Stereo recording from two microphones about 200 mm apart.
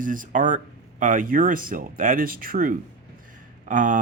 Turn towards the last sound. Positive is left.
turn(degrees=-40)  # may be behind; listen again after turning